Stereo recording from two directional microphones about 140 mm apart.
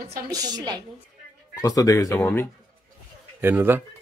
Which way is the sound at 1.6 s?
25° left (ahead or behind).